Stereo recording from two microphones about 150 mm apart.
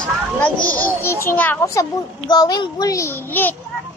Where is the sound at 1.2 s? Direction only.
10° left (ahead or behind).